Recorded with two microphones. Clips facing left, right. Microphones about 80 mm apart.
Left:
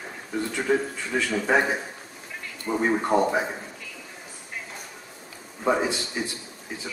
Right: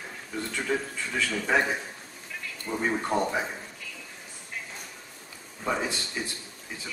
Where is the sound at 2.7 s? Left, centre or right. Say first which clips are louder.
Left 5 dB; left.